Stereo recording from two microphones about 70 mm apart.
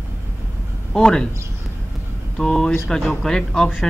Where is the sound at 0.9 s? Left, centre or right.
Centre.